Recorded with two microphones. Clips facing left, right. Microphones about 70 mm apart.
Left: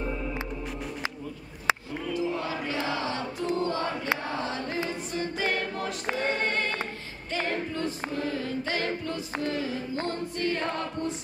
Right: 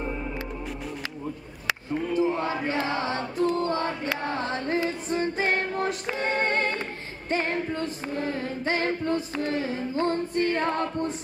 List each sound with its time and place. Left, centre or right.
2.1 s chant: right
3.5 s choir: right
4.4 s a sound: right
5.1 s female singing: right
6.4 s music: right
7.2 s singing: right